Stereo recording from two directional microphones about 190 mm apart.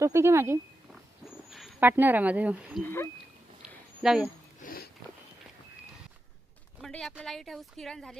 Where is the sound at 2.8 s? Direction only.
10° left (ahead or behind).